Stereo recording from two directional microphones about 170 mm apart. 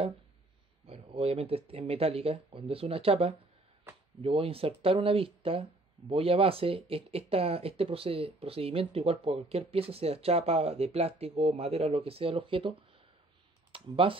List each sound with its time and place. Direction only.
0.8 s speech: 35° right (ahead or behind)
13.7 s computer keyboard: 30° right (ahead or behind)